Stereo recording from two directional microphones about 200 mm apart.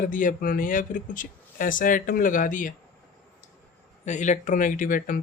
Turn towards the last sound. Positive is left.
turn(degrees=40)  # may be behind; listen again after turning